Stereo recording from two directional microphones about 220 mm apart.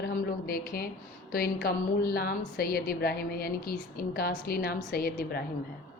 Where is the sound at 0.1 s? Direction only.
40° left (ahead or behind).